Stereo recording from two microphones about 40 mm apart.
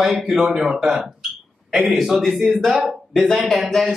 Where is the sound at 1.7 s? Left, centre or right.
Right.